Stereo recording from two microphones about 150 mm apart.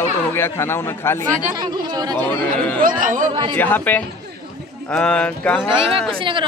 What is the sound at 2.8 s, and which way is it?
Speech, 60° right (ahead or behind).